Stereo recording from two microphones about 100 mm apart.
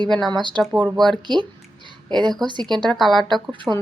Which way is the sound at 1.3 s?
50° right (ahead or behind).